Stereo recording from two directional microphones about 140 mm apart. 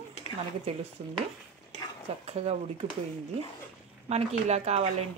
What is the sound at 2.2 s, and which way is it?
Speech, 45° right (ahead or behind).